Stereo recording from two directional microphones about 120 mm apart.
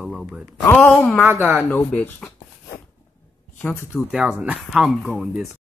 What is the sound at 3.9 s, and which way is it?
Speech, 5° right (ahead or behind).